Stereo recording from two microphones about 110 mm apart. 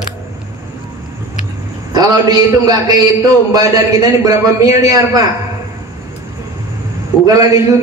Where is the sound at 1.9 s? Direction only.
35° right (ahead or behind).